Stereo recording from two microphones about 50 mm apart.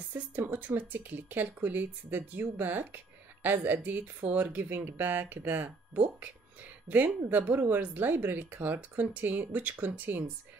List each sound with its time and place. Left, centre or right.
0.4 s speech: right